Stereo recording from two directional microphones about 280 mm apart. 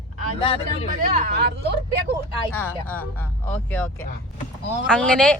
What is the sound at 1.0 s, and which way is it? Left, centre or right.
Speech, right.